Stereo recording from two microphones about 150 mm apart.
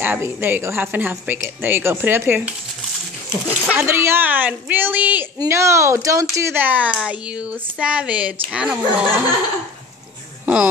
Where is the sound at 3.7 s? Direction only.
15° right (ahead or behind).